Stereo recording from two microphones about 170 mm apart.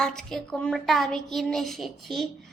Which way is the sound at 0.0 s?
5° left (ahead or behind).